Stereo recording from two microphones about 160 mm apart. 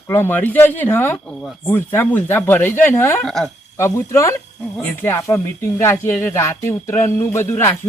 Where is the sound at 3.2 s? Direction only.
5° left (ahead or behind).